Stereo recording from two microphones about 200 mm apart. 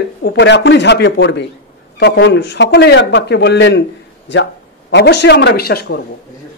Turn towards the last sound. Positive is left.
turn(degrees=50)  # may be behind; listen again after turning